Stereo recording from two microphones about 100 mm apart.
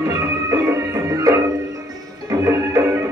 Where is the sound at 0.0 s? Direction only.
35° right (ahead or behind).